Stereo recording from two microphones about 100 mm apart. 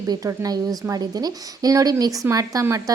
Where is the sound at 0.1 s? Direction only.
40° right (ahead or behind).